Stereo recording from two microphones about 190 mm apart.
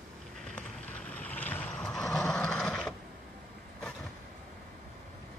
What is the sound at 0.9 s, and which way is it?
Vehicle, 5° left (ahead or behind).